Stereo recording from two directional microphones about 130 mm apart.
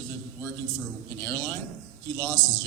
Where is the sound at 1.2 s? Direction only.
20° left (ahead or behind).